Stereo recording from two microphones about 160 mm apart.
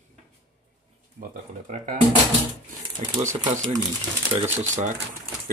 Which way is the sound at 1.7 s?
55° right (ahead or behind).